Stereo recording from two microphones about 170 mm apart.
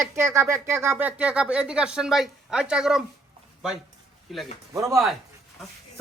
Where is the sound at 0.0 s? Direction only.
15° right (ahead or behind).